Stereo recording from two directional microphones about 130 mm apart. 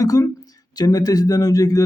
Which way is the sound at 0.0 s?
25° left (ahead or behind).